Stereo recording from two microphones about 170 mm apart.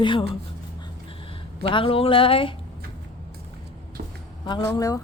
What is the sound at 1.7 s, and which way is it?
Speech, 30° left (ahead or behind).